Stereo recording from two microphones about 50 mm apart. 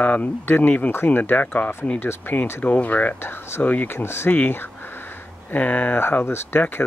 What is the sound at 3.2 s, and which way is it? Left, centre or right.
Speech, left.